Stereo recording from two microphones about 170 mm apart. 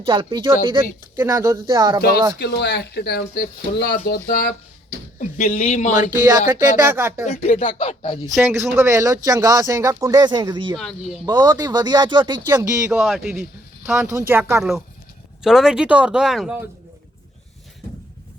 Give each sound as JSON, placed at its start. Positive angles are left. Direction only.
{"t": 0.0, "sound": "speech", "side_deg": -30}
{"t": 2.0, "sound": "speech", "side_deg": 65}
{"t": 2.4, "sound": "speech", "side_deg": 85}
{"t": 5.2, "sound": "speech", "side_deg": 40}
{"t": 6.1, "sound": "speech", "side_deg": -20}
{"t": 7.3, "sound": "speech", "side_deg": 40}
{"t": 8.4, "sound": "speech", "side_deg": -15}
{"t": 10.8, "sound": "speech", "side_deg": 0}
{"t": 11.3, "sound": "speech", "side_deg": -25}
{"t": 12.5, "sound": "speech", "side_deg": -15}
{"t": 13.1, "sound": "speech", "side_deg": 0}
{"t": 14.1, "sound": "speech", "side_deg": -15}
{"t": 14.6, "sound": "speech", "side_deg": 0}